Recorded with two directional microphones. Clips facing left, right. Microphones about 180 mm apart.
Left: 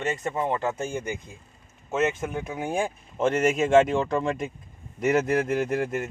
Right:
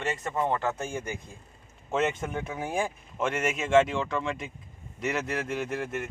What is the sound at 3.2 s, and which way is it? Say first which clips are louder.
Speech: left 7 dB; 40° left (ahead or behind).